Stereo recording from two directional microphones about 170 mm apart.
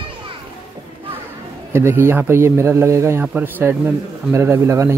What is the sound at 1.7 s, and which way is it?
Speech, 15° right (ahead or behind).